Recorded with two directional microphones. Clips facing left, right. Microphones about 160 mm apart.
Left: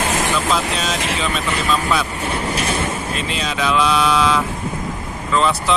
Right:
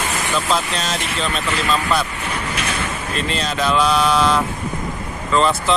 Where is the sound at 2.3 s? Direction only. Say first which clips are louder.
Left 3 dB; 30° left (ahead or behind).